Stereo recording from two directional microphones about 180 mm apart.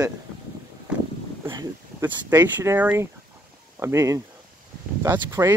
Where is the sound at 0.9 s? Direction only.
5° right (ahead or behind).